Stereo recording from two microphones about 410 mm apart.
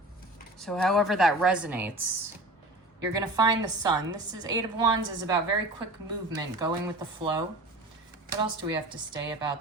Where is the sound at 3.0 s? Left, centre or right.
Centre.